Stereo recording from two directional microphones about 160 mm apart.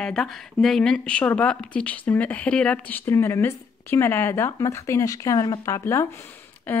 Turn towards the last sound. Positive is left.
turn(degrees=10)  # may be behind; listen again after turning